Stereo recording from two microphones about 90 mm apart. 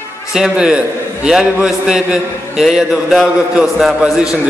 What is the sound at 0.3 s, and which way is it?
A man's voice, 5° right (ahead or behind).